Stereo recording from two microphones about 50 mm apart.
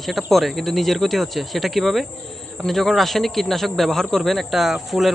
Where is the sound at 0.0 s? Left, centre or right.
Centre.